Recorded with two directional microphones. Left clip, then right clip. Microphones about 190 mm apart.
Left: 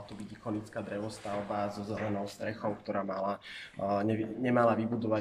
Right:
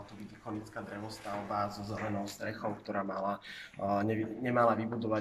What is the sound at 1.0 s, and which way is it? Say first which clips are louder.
Speech: left 2 dB; 15° left (ahead or behind).